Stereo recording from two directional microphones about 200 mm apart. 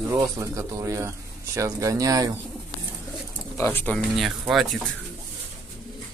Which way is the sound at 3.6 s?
10° left (ahead or behind).